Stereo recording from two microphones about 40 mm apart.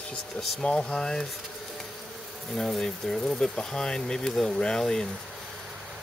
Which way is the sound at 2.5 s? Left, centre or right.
Centre.